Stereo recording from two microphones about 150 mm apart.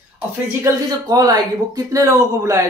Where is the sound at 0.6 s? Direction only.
25° right (ahead or behind).